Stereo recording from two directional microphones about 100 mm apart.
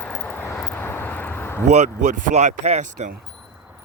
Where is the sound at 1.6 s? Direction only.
90° right.